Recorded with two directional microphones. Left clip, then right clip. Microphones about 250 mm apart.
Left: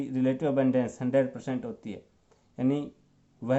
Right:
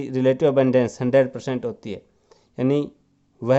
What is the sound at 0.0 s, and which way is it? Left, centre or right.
Speech, right.